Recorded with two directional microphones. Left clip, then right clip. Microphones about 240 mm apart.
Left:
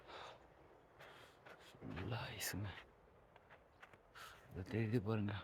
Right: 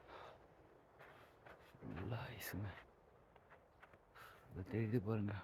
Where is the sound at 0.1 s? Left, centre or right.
Centre.